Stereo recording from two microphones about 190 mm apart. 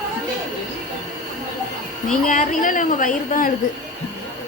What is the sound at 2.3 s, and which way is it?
A woman's voice, 45° left (ahead or behind).